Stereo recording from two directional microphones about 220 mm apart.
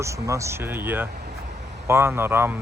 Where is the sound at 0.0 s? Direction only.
15° right (ahead or behind).